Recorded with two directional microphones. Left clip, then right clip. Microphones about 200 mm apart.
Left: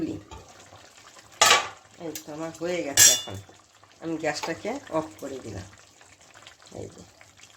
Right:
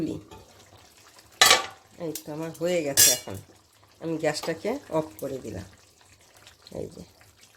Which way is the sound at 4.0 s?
30° right (ahead or behind).